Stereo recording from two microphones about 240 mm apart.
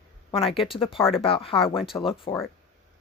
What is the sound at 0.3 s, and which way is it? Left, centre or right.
Speech, left.